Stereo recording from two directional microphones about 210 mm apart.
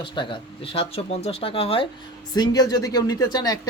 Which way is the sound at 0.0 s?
25° left (ahead or behind).